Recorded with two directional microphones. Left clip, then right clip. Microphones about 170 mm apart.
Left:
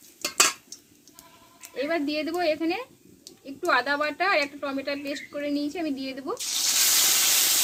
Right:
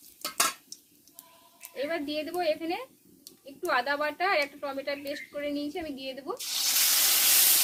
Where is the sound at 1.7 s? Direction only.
25° left (ahead or behind).